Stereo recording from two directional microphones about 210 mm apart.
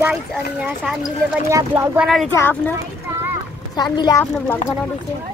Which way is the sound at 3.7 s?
20° left (ahead or behind).